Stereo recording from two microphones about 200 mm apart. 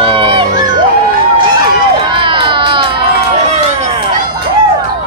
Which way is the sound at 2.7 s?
25° right (ahead or behind).